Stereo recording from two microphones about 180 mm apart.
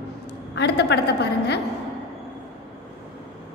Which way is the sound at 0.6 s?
70° left (ahead or behind).